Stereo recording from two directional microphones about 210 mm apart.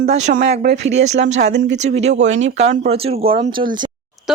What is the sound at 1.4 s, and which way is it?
Speech, 55° right (ahead or behind).